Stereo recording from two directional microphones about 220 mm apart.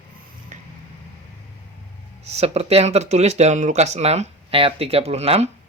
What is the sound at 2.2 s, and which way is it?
Speech, 30° right (ahead or behind).